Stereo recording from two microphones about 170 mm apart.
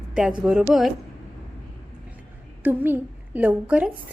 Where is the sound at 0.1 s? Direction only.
5° right (ahead or behind).